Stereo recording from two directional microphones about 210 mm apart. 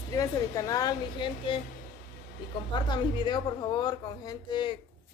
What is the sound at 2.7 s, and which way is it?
A woman's voice, 20° left (ahead or behind).